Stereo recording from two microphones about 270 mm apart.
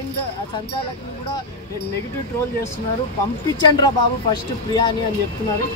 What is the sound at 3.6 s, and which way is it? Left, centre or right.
Speech, centre.